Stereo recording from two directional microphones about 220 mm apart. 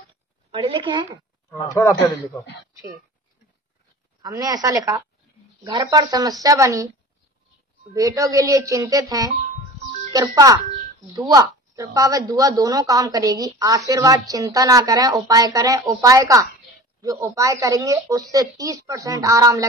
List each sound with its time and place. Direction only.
0.5 s a woman's voice: 25° right (ahead or behind)
1.5 s a man's voice: 15° left (ahead or behind)
4.2 s a woman's voice: 15° right (ahead or behind)
7.9 s a woman's voice: 15° right (ahead or behind)